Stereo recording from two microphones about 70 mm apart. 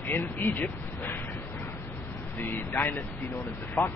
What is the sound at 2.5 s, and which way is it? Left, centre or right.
Speech, left.